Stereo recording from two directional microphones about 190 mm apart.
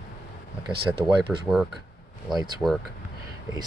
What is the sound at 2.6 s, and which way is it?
Speech, 5° right (ahead or behind).